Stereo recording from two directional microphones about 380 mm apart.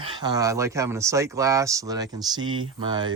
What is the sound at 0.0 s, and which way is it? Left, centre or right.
Speech, centre.